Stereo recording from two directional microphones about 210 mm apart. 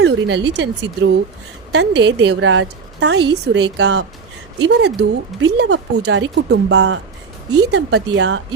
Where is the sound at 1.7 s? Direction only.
55° right (ahead or behind).